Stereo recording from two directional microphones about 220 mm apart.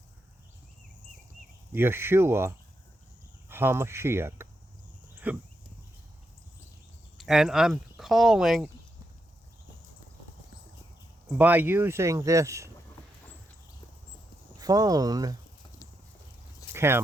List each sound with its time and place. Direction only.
1.7 s speech: 10° right (ahead or behind)
5.1 s a sound: 5° right (ahead or behind)
7.2 s speech: centre (ahead or behind)
11.3 s speech: 10° right (ahead or behind)
14.6 s speech: 15° right (ahead or behind)
16.7 s speech: 10° right (ahead or behind)